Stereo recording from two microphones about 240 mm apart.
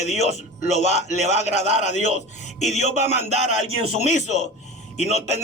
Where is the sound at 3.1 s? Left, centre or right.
Right.